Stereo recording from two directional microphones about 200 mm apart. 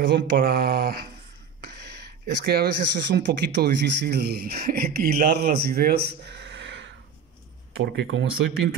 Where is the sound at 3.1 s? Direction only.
60° right (ahead or behind).